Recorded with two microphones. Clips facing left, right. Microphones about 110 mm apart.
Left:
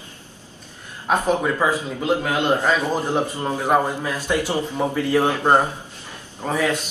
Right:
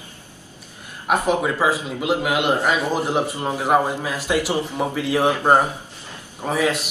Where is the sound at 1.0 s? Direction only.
15° right (ahead or behind).